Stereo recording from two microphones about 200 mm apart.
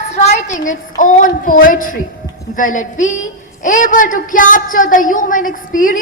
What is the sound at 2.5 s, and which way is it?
A woman's voice, 40° left (ahead or behind).